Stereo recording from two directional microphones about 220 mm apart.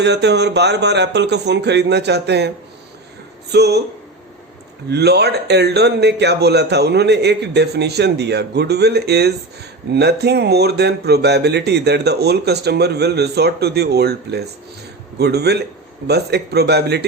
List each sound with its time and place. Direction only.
0.0 s speech: 50° right (ahead or behind)
3.5 s speech: 50° right (ahead or behind)
4.9 s speech: 50° right (ahead or behind)